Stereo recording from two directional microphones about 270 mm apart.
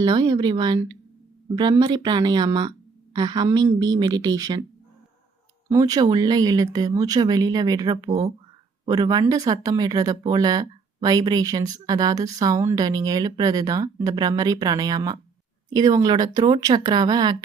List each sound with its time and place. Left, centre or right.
0.0 s speech: centre
5.6 s speech: centre